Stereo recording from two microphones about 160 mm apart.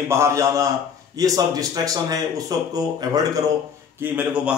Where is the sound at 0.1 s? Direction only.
20° right (ahead or behind).